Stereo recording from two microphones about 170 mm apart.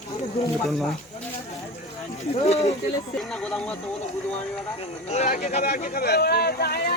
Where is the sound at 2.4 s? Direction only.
40° left (ahead or behind).